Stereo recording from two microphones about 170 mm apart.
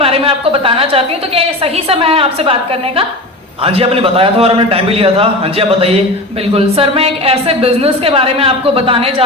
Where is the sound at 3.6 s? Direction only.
35° right (ahead or behind).